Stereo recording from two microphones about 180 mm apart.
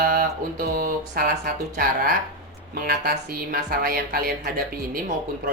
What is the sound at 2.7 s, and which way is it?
Speech, 60° right (ahead or behind).